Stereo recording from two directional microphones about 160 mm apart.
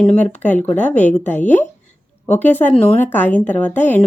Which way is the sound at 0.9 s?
45° left (ahead or behind).